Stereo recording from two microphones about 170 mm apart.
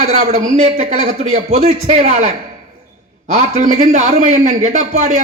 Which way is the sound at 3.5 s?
45° right (ahead or behind).